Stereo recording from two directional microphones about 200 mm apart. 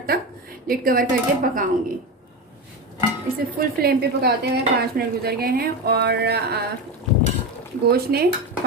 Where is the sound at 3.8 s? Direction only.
50° right (ahead or behind).